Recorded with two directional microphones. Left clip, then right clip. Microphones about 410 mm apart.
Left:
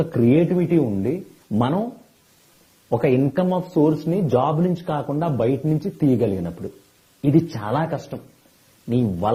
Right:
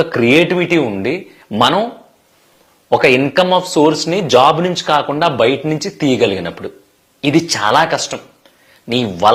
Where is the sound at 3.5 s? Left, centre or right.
Centre.